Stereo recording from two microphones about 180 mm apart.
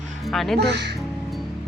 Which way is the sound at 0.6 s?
70° right (ahead or behind).